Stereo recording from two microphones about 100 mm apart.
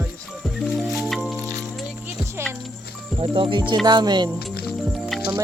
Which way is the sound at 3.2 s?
60° right (ahead or behind).